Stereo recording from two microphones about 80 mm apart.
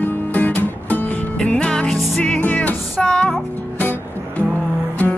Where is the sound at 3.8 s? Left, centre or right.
Left.